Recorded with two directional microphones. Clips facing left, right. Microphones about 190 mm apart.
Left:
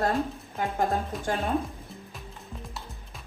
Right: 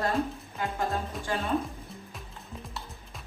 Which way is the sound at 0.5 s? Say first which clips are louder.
Left 4 dB; 40° left (ahead or behind).